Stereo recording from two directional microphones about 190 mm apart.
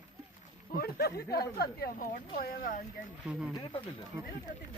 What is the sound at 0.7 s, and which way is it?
A woman's voice, 55° left (ahead or behind).